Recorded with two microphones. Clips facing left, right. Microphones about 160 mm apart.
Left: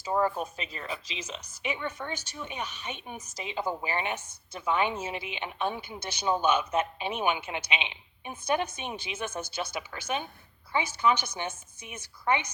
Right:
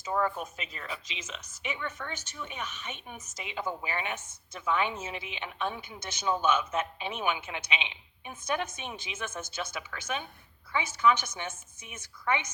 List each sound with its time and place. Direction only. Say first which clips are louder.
0.0 s a woman's voice: left 3 dB; 30° left (ahead or behind)